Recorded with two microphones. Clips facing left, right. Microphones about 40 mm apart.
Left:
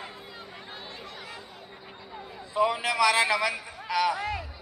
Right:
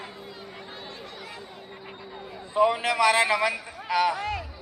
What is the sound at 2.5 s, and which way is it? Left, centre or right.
Speech, centre.